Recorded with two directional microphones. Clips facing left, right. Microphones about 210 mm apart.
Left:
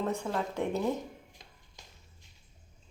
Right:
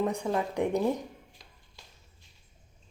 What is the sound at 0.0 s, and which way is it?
Speech, 15° right (ahead or behind).